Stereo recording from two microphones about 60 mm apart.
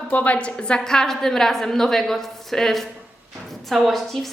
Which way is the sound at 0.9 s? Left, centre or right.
Centre.